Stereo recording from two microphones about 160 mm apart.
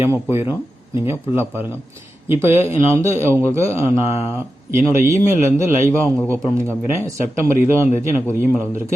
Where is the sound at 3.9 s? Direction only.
40° left (ahead or behind).